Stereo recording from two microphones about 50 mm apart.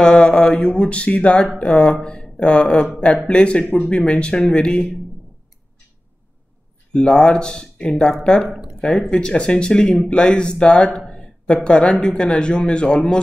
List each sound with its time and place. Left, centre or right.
0.0 s speech: centre
6.9 s speech: centre